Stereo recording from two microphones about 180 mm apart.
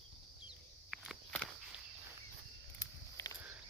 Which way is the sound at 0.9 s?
Centre (ahead or behind).